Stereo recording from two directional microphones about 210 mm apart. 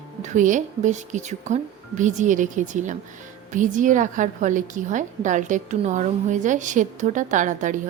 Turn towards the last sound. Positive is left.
turn(degrees=-35)  # may be behind; listen again after turning